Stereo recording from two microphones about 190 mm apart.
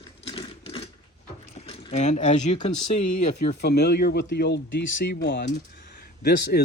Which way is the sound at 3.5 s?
60° left (ahead or behind).